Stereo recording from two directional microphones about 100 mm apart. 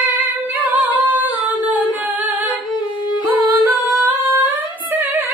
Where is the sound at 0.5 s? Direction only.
15° right (ahead or behind).